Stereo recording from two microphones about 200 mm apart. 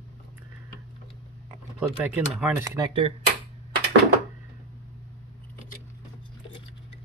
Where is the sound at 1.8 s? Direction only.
10° right (ahead or behind).